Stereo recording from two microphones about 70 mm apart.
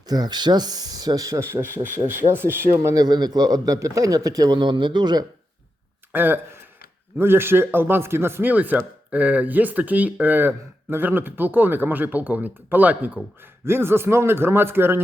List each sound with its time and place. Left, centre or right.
0.1 s speech: right
1.4 s speech: right
2.9 s speech: right
6.1 s speech: right
8.4 s speech: right
13.7 s speech: right